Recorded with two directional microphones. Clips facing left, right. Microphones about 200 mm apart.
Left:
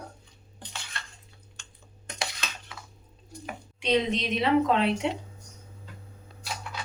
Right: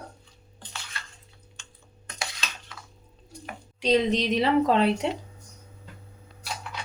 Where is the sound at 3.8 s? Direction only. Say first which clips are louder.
Right 3 dB; 40° right (ahead or behind).